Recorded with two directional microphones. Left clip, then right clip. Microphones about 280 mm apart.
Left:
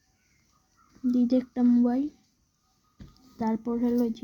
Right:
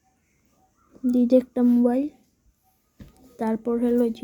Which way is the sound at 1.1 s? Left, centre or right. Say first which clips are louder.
Right 7 dB; centre.